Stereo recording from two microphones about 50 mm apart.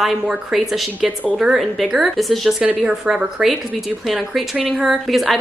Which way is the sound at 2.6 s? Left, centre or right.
Centre.